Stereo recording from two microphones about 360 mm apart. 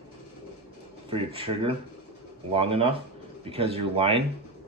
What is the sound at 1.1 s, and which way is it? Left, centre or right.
Speech, centre.